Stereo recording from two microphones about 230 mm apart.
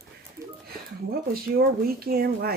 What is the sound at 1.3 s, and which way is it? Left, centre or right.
Speech, right.